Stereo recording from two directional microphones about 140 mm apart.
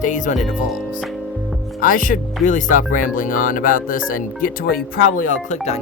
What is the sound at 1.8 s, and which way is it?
Speech, 70° left (ahead or behind).